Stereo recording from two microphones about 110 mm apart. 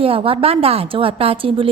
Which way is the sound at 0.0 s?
60° right (ahead or behind).